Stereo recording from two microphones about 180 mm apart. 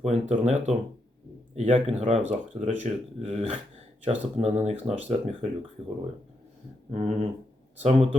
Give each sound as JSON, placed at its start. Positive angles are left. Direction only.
{"t": 0.0, "sound": "speech", "side_deg": -40}
{"t": 6.9, "sound": "speech", "side_deg": -40}